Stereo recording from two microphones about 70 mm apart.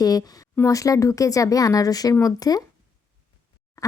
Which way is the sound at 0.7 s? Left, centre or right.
Left.